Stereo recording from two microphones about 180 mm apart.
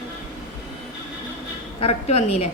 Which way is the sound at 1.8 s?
35° left (ahead or behind).